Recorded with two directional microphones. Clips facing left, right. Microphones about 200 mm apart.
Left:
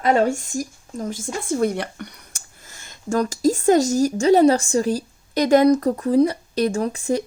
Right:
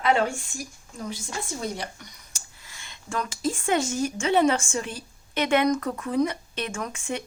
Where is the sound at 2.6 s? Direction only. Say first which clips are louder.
Left 12 dB; 45° left (ahead or behind).